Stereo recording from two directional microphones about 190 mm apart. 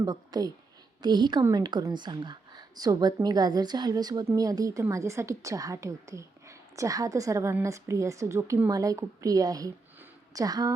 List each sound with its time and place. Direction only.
0.0 s a woman's voice: 20° right (ahead or behind)